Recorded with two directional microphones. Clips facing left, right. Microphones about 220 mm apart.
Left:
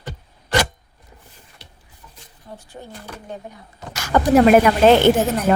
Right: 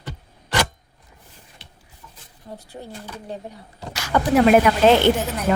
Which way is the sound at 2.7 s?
20° right (ahead or behind).